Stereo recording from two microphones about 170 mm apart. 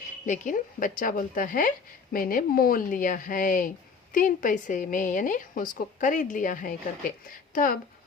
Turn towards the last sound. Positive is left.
turn(degrees=55)  # may be behind; listen again after turning